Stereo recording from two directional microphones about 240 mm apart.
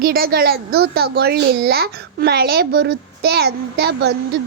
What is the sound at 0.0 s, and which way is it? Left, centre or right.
A child's voice, right.